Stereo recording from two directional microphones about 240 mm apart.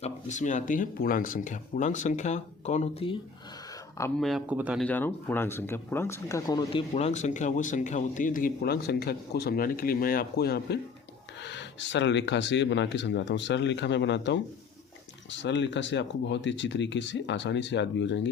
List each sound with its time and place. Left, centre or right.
0.0 s speech: left
4.2 s speech: centre
4.9 s speech: centre
6.9 s speech: left